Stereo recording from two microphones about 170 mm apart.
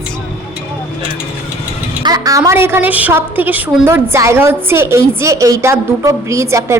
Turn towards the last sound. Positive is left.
turn(degrees=-15)  # may be behind; listen again after turning